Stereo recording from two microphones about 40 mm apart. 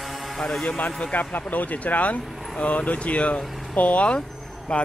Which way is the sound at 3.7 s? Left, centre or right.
Left.